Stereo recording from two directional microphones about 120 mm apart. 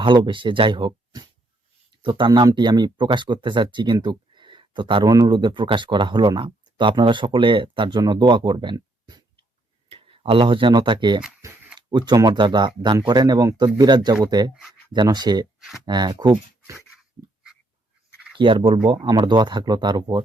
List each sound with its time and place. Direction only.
0.0 s speech: 45° right (ahead or behind)
4.0 s a sound: 40° right (ahead or behind)
5.1 s speech: 35° right (ahead or behind)
9.9 s speech: 50° right (ahead or behind)
18.3 s speech: 45° right (ahead or behind)